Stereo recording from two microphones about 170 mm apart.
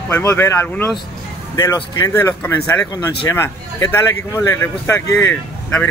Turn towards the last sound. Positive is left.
turn(degrees=15)  # may be behind; listen again after turning